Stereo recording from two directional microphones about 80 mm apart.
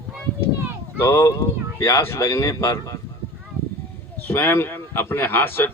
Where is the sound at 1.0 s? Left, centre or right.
Left.